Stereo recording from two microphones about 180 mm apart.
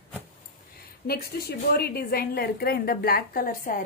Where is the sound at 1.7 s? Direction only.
60° left (ahead or behind).